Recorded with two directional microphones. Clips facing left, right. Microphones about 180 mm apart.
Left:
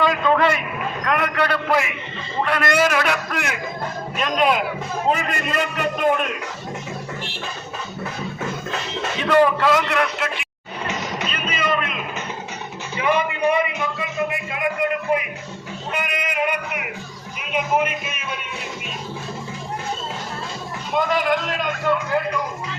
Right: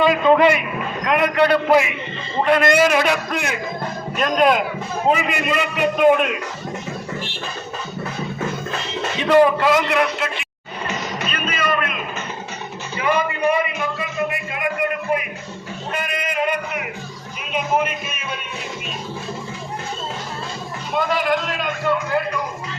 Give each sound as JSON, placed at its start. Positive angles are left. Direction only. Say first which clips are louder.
{"t": 0.0, "sound": "a man's voice", "louder": "right 4 dB", "side_deg": -15}
{"t": 4.4, "sound": "a man's voice", "louder": "right 2 dB", "side_deg": 0}
{"t": 9.2, "sound": "a man's voice", "louder": "right 2 dB", "side_deg": -15}
{"t": 10.8, "sound": "music", "louder": "right 1 dB", "side_deg": 20}
{"t": 13.0, "sound": "music", "louder": "even", "side_deg": 20}
{"t": 15.9, "sound": "a sound", "louder": "right 1 dB", "side_deg": 15}
{"t": 20.9, "sound": "speech", "louder": "even", "side_deg": 15}